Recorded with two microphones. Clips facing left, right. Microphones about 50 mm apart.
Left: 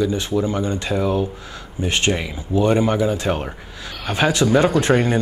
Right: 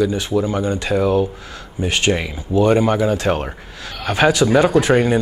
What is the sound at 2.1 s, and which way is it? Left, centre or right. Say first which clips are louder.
Speech: right 3 dB; centre.